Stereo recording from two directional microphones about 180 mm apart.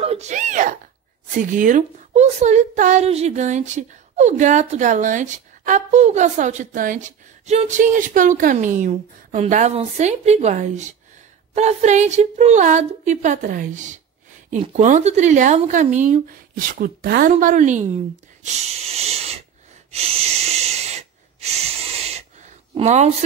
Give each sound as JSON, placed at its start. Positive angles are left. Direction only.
{"t": 0.0, "sound": "a sound", "side_deg": -35}
{"t": 1.3, "sound": "a woman's voice", "side_deg": -45}
{"t": 16.7, "sound": "a woman's voice", "side_deg": -55}
{"t": 19.9, "sound": "wheeze", "side_deg": -35}